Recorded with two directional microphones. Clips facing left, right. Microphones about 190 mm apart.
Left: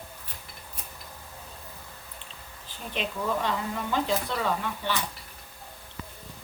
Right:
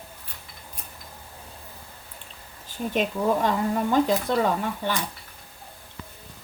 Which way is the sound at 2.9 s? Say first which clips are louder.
Right 6 dB; 45° right (ahead or behind).